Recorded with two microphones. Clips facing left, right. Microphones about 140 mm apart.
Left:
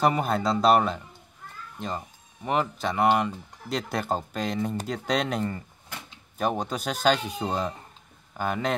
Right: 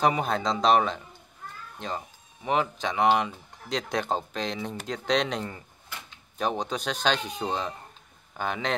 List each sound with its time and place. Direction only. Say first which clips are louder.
0.0 s speech: left 1 dB; 5° left (ahead or behind)